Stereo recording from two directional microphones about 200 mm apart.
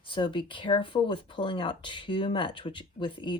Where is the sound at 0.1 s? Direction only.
25° left (ahead or behind).